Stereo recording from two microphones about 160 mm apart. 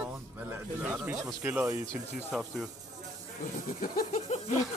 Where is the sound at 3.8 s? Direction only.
60° left (ahead or behind).